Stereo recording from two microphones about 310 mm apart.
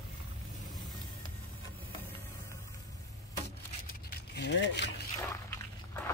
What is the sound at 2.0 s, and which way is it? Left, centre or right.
Music, centre.